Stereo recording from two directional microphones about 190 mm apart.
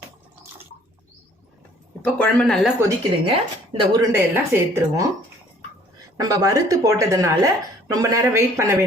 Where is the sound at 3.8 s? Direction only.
20° right (ahead or behind).